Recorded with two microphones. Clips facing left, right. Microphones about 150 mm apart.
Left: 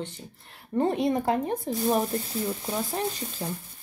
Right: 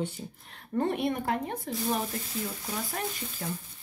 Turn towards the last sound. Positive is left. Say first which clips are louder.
# left 5 dB
turn(degrees=25)  # may be behind; listen again after turning